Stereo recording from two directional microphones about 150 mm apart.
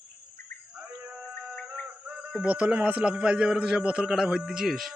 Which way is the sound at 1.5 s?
5° left (ahead or behind).